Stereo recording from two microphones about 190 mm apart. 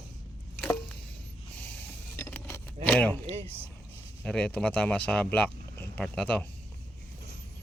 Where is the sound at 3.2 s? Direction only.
30° right (ahead or behind).